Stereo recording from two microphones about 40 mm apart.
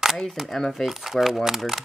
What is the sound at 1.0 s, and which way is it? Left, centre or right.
Speech, centre.